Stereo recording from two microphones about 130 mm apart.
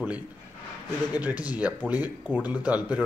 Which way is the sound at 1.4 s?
10° right (ahead or behind).